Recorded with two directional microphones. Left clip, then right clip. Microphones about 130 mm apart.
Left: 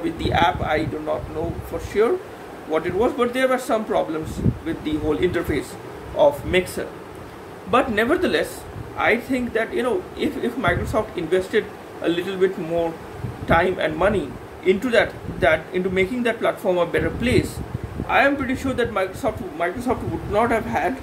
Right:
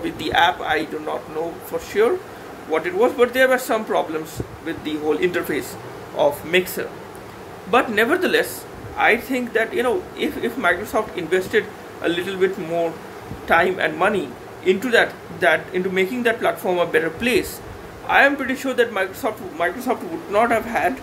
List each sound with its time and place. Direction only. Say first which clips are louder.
0.0 s a man's voice: right 2 dB; 15° left (ahead or behind)
2.7 s a man's voice: right 2 dB; 15° left (ahead or behind)